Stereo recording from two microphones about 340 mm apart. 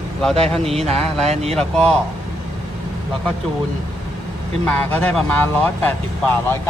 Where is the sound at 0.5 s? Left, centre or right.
Centre.